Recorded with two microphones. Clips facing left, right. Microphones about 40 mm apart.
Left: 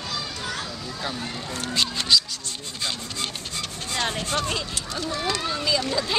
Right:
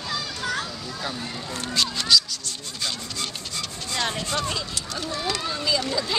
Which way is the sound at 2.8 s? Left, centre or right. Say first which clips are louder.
Left 1 dB; left.